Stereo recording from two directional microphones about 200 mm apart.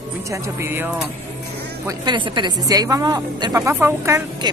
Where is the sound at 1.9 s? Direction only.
20° right (ahead or behind).